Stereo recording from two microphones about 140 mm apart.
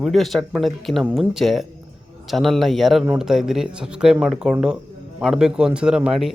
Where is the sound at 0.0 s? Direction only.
Centre (ahead or behind).